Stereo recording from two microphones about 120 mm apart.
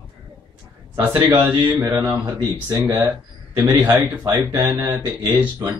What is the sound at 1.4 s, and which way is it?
Speech, 15° right (ahead or behind).